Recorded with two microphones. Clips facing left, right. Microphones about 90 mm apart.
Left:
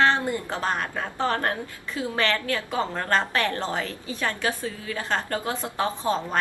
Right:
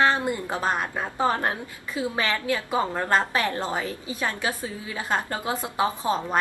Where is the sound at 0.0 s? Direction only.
15° right (ahead or behind).